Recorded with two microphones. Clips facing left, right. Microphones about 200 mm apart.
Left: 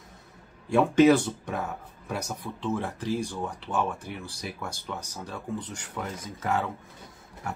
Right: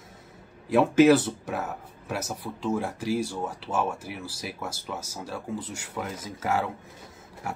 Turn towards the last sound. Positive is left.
turn(degrees=-10)  # may be behind; listen again after turning